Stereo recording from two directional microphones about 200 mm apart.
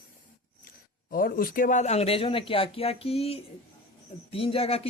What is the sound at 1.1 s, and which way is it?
Speech, 45° left (ahead or behind).